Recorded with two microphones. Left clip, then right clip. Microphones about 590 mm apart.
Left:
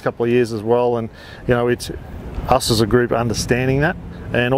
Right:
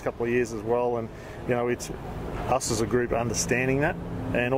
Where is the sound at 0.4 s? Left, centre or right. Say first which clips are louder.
Left 9 dB; left.